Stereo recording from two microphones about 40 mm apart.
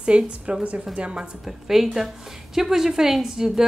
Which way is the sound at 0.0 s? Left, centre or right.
Right.